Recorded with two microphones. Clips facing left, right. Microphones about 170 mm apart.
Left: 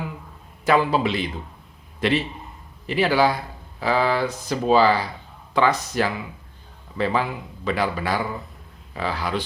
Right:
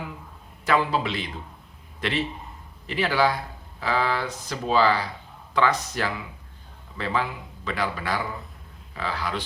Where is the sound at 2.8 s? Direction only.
10° left (ahead or behind).